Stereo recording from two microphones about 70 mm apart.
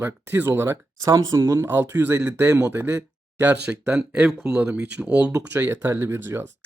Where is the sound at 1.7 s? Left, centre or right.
Right.